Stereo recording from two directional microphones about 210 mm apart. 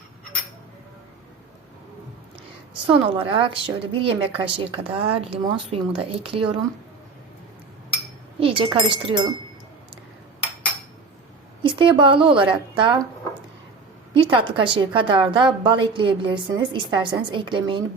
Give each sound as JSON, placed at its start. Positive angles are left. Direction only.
{"t": 2.8, "sound": "a woman's voice", "side_deg": -25}
{"t": 8.4, "sound": "speech", "side_deg": -25}
{"t": 11.6, "sound": "a woman's voice", "side_deg": -25}
{"t": 14.1, "sound": "a woman's voice", "side_deg": -25}